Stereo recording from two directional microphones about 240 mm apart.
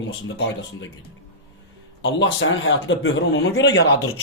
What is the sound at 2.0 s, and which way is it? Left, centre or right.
A man's voice, left.